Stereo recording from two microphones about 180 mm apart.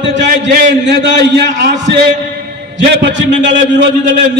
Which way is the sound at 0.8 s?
70° right (ahead or behind).